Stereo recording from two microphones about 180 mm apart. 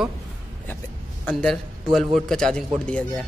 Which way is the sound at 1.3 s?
Centre (ahead or behind).